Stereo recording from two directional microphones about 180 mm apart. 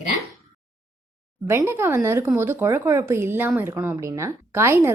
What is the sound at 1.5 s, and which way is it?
Speech, 15° right (ahead or behind).